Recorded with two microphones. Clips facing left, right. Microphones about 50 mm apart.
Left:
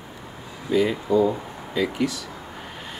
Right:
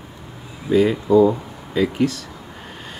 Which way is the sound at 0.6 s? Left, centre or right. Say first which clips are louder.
Right 5 dB; centre.